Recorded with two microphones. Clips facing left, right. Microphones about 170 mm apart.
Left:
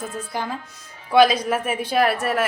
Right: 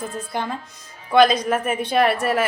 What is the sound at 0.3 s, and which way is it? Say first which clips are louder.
Speech: right 2 dB; 5° left (ahead or behind).